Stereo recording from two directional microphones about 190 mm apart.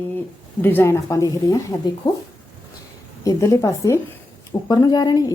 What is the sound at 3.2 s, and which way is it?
A woman's voice, 15° left (ahead or behind).